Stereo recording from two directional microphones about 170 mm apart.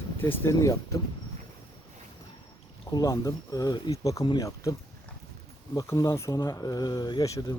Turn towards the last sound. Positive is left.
turn(degrees=20)  # may be behind; listen again after turning